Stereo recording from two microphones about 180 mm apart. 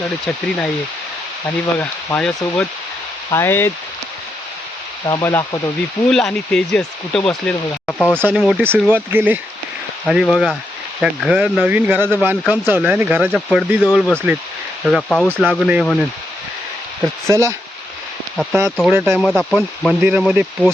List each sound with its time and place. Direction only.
1.5 s speech: 15° left (ahead or behind)
5.0 s speech: 15° left (ahead or behind)
6.1 s speech: 5° left (ahead or behind)
8.4 s speech: 5° right (ahead or behind)
15.8 s speech: 5° left (ahead or behind)
17.2 s speech: 15° right (ahead or behind)
18.9 s speech: 10° right (ahead or behind)
19.2 s speech: 5° left (ahead or behind)
20.0 s speech: 5° right (ahead or behind)